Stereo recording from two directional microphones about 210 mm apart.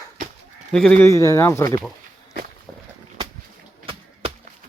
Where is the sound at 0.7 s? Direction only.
5° left (ahead or behind).